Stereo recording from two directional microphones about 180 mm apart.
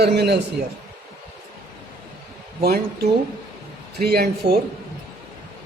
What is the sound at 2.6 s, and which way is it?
Speech, 60° right (ahead or behind).